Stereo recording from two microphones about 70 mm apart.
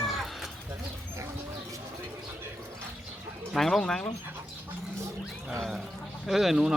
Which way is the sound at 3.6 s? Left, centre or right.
Centre.